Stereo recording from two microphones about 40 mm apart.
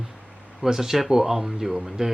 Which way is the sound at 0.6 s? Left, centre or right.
Centre.